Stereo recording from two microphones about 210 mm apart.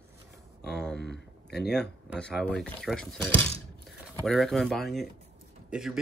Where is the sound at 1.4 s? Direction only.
50° left (ahead or behind).